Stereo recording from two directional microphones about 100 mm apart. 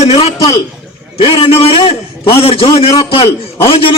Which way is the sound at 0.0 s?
85° left.